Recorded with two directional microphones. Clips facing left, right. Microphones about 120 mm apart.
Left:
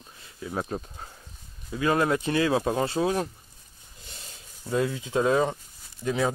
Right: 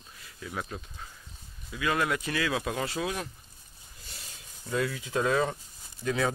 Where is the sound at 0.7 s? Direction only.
40° left (ahead or behind).